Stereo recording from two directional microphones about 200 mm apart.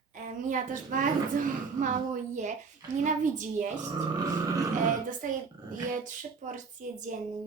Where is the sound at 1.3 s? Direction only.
40° right (ahead or behind).